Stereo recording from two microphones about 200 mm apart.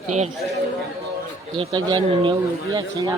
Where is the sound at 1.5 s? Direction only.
25° right (ahead or behind).